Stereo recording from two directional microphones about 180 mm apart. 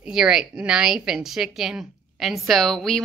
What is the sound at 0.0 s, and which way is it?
A woman's voice, 5° right (ahead or behind).